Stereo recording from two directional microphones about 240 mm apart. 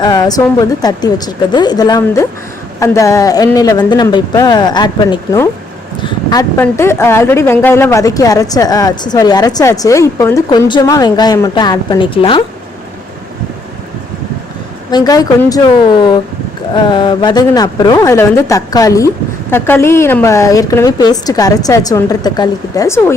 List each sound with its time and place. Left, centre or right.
0.0 s speech: centre
14.8 s speech: centre